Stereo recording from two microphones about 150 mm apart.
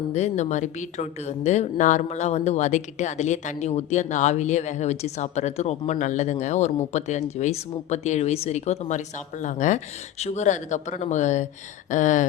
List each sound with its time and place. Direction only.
0.1 s speech: 50° left (ahead or behind)